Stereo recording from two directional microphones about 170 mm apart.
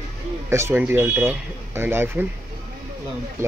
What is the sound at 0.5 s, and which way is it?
Speech, 15° right (ahead or behind).